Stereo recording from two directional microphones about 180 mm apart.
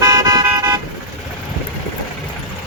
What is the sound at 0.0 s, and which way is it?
Toot, 20° right (ahead or behind).